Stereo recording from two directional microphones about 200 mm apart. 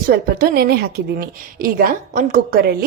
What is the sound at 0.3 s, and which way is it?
Speech, 50° right (ahead or behind).